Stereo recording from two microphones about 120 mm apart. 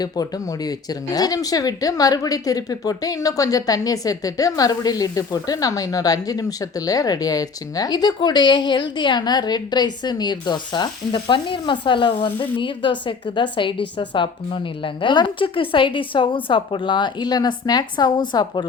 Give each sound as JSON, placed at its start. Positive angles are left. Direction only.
{"t": 0.0, "sound": "speech", "side_deg": 30}